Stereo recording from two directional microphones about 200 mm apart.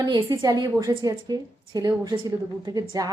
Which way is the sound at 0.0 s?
20° right (ahead or behind).